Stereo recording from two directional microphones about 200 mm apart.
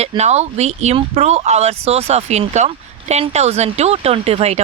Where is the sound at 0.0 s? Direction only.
35° right (ahead or behind).